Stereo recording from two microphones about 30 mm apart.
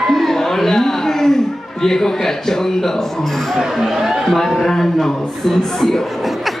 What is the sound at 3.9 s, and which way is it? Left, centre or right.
Speech, centre.